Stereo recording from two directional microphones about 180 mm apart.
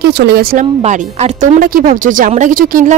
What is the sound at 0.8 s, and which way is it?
Speech, 40° right (ahead or behind).